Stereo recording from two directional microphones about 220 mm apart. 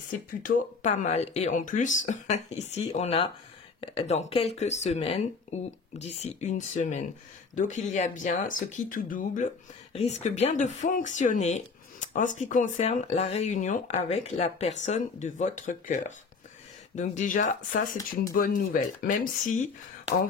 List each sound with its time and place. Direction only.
0.4 s speech: 35° left (ahead or behind)